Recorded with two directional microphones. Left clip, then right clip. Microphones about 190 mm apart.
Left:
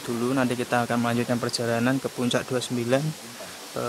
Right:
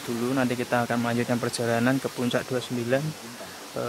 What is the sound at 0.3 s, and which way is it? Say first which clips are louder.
Speech: left 1 dB; 15° left (ahead or behind).